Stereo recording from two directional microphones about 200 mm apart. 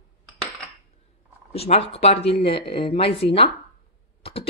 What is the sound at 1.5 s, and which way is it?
A woman's voice, 30° left (ahead or behind).